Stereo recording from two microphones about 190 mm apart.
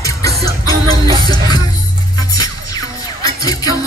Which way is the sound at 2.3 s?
20° left (ahead or behind).